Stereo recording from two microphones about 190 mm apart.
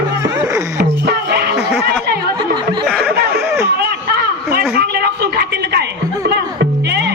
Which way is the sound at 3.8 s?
55° right (ahead or behind).